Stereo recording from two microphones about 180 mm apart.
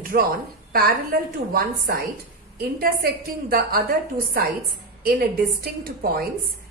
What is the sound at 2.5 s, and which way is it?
A woman's voice, 55° right (ahead or behind).